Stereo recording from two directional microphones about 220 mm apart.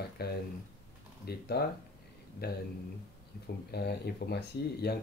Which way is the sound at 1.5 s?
50° left (ahead or behind).